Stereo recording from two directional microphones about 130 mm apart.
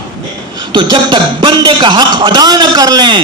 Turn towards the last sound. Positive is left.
turn(degrees=-35)  # may be behind; listen again after turning